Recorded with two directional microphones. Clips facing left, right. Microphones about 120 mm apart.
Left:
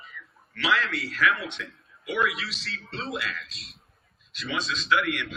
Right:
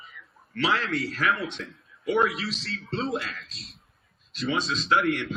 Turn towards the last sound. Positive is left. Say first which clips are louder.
# right 2 dB
turn(degrees=-35)  # may be behind; listen again after turning